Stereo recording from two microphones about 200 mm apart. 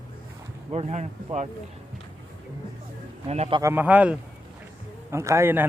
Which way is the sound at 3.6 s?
10° right (ahead or behind).